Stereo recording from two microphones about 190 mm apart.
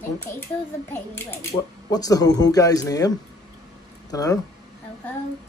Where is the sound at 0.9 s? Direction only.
10° left (ahead or behind).